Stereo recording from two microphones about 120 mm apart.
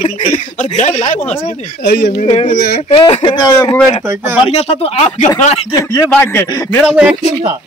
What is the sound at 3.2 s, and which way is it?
Speech, 35° left (ahead or behind).